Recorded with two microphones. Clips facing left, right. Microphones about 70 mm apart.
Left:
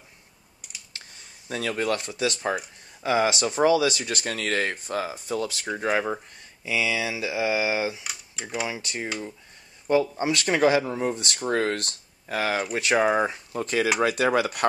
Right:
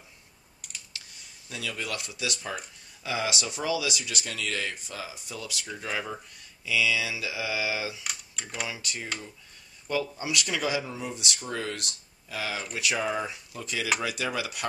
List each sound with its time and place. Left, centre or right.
0.9 s computer keyboard: left
1.5 s speech: left
8.0 s speech: centre
8.6 s speech: left